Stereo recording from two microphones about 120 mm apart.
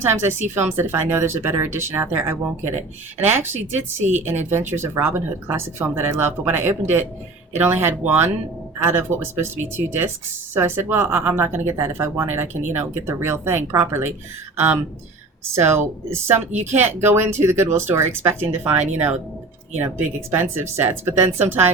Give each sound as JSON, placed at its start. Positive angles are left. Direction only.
{"t": 0.0, "sound": "speech", "side_deg": -20}
{"t": 4.0, "sound": "a woman's voice", "side_deg": -75}
{"t": 4.7, "sound": "speech", "side_deg": -20}
{"t": 20.3, "sound": "speech", "side_deg": -20}